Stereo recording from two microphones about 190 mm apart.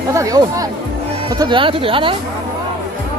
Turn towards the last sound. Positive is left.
turn(degrees=-25)  # may be behind; listen again after turning